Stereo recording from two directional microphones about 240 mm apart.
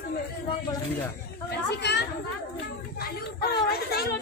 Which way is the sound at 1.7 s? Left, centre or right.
Left.